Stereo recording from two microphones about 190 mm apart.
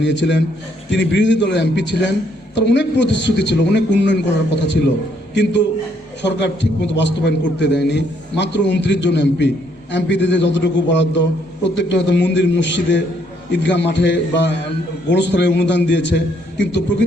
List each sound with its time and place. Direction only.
0.0 s a man's voice: 70° left (ahead or behind)